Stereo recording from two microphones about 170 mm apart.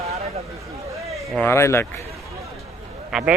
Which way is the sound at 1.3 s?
10° left (ahead or behind).